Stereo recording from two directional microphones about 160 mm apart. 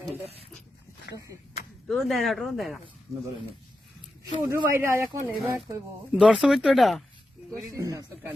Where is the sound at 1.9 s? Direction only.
Centre (ahead or behind).